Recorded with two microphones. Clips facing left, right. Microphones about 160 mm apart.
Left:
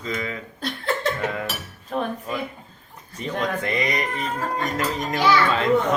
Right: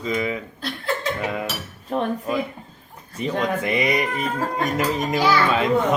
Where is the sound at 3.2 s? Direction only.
15° right (ahead or behind).